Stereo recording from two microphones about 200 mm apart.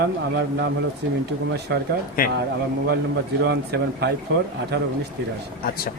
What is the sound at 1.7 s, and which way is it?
Speech, 60° right (ahead or behind).